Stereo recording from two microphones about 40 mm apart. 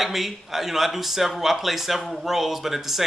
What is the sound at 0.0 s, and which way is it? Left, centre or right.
Speech, centre.